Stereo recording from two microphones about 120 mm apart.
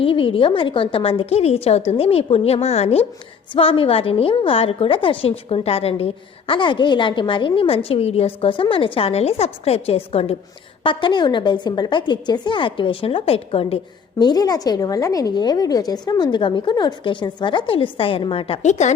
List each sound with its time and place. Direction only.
0.0 s a woman's voice: 45° left (ahead or behind)
3.5 s a woman's voice: 50° left (ahead or behind)
6.5 s a woman's voice: 40° left (ahead or behind)
10.8 s a woman's voice: 40° left (ahead or behind)
14.2 s a woman's voice: 35° left (ahead or behind); by 18.6 s 50° left (ahead or behind)
18.6 s a woman's voice: 75° left (ahead or behind)